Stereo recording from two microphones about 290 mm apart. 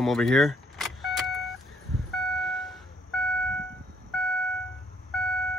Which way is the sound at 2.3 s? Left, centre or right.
Centre.